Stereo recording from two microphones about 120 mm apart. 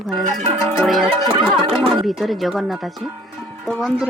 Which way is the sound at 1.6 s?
40° right (ahead or behind).